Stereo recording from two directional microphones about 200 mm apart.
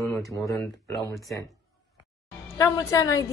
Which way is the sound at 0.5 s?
15° left (ahead or behind).